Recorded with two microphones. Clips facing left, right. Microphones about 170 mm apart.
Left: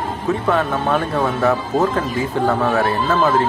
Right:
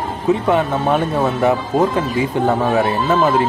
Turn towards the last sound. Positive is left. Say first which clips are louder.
# right 1 dB
turn(degrees=-20)  # may be behind; listen again after turning